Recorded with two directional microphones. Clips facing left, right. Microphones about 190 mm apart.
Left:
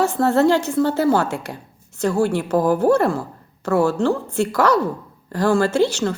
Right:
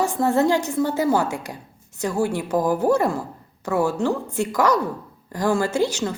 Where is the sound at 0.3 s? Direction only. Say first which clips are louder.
Left 3 dB; 15° right (ahead or behind).